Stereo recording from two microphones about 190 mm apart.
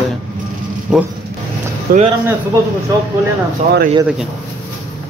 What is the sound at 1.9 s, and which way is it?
Speech, 50° right (ahead or behind).